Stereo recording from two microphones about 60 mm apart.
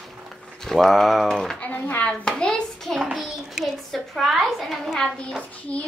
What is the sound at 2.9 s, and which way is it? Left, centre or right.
A child's voice, centre.